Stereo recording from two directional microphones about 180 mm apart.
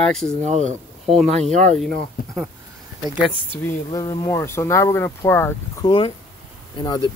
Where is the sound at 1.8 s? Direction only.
Centre (ahead or behind).